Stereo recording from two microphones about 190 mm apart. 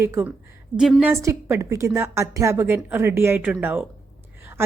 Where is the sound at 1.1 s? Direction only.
15° right (ahead or behind).